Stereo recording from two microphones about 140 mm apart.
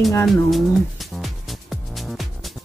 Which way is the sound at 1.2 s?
Centre (ahead or behind).